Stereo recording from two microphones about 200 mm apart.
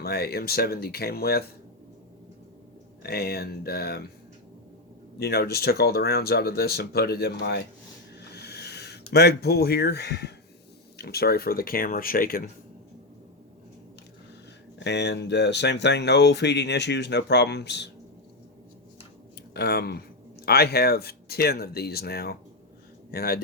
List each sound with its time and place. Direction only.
0.0 s speech: 50° left (ahead or behind)
3.0 s speech: 50° left (ahead or behind)
5.2 s speech: 50° left (ahead or behind)
8.3 s a sound: 55° left (ahead or behind)
10.9 s speech: 50° left (ahead or behind)
14.8 s speech: 60° left (ahead or behind)
19.5 s speech: 55° left (ahead or behind)